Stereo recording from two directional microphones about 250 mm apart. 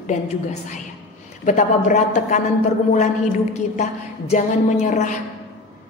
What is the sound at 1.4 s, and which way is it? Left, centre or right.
Speech, left.